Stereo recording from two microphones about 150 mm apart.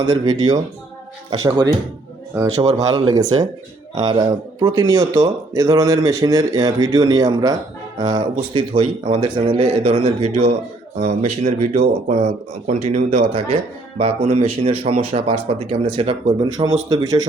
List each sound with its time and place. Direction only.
0.0 s speech: 25° right (ahead or behind)
4.6 s speech: 20° right (ahead or behind)